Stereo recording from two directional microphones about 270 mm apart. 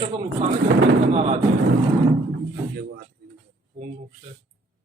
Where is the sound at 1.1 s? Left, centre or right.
Right.